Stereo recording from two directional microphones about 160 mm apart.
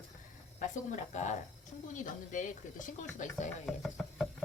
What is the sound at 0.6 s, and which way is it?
Speech, 50° left (ahead or behind).